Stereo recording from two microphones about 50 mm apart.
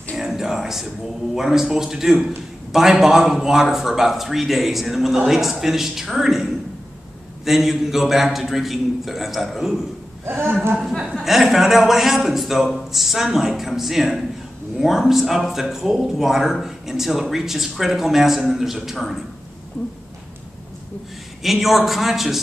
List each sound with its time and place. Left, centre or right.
0.2 s a sound: centre
1.3 s a man's voice: centre
10.2 s speech: right
10.8 s a man's voice: centre
21.4 s a man's voice: centre